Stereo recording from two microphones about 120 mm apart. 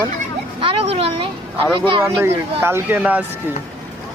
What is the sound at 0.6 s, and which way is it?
Speech, 50° right (ahead or behind).